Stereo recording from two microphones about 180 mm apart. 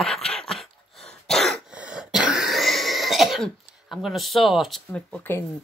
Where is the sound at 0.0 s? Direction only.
5° left (ahead or behind).